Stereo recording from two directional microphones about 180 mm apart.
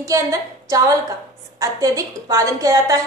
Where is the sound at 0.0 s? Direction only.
20° right (ahead or behind).